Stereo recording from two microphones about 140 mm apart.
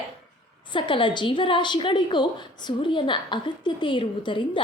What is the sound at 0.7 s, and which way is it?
A woman's voice, 35° left (ahead or behind).